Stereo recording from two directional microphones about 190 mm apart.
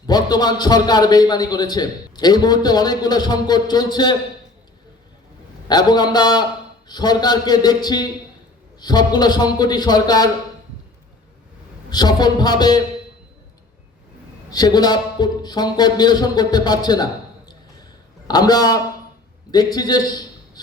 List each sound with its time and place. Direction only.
0.1 s a man's voice: 20° left (ahead or behind)
5.6 s a man's voice: 20° left (ahead or behind)
11.9 s a man's voice: 20° left (ahead or behind)
14.5 s a man's voice: 20° left (ahead or behind)
18.3 s a man's voice: 20° left (ahead or behind)